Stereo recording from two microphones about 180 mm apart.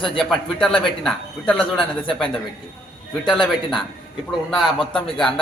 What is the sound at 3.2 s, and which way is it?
Speech, centre (ahead or behind).